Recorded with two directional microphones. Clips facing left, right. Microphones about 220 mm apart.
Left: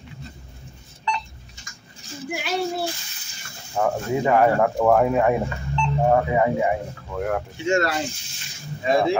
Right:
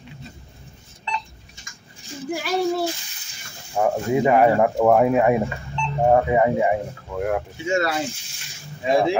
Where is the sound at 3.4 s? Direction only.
15° right (ahead or behind).